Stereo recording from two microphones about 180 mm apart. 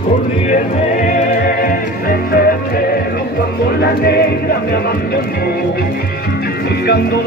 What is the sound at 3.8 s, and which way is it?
Music, 65° left (ahead or behind).